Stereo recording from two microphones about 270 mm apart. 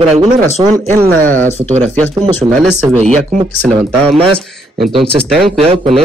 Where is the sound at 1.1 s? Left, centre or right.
Centre.